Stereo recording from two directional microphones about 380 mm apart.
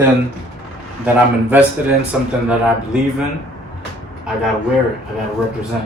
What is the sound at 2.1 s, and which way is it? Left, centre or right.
Speech, centre.